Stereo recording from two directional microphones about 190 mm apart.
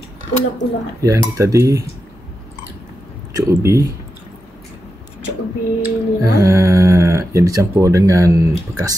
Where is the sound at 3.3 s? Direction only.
15° right (ahead or behind).